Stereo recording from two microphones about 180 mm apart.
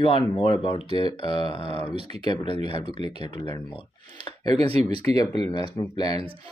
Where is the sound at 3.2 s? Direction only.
25° left (ahead or behind).